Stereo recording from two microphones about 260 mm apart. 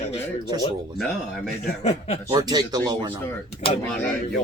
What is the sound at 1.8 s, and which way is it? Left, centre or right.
Speech, left.